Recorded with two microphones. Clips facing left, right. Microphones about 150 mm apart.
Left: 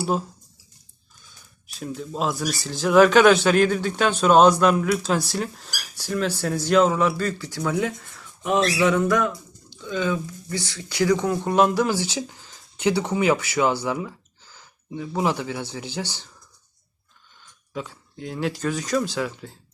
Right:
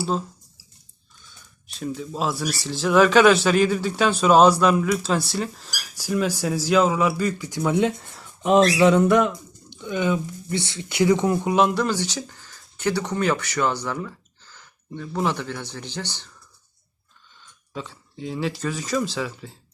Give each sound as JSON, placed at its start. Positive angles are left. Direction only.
{"t": 1.6, "sound": "speech", "side_deg": 0}
{"t": 5.9, "sound": "speech", "side_deg": -10}
{"t": 11.4, "sound": "speech", "side_deg": 0}
{"t": 17.7, "sound": "speech", "side_deg": 0}